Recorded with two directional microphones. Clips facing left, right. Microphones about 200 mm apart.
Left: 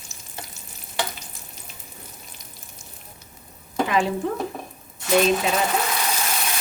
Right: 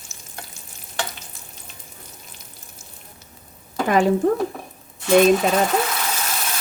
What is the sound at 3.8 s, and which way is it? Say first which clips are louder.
Speech: right 7 dB; 45° right (ahead or behind).